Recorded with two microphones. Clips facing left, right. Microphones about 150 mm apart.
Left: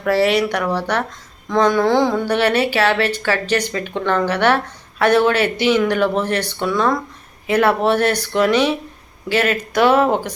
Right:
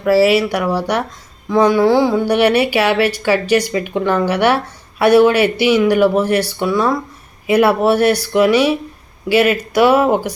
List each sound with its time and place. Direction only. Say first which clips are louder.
0.0 s speech: right 4 dB; 5° right (ahead or behind)